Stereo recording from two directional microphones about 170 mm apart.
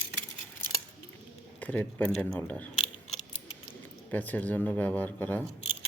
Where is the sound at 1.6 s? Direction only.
10° left (ahead or behind).